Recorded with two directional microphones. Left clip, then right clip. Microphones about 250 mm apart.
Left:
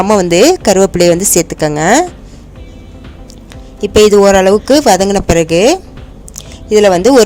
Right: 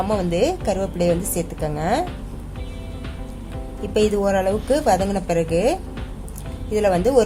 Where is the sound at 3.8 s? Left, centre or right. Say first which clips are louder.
Left 14 dB; left.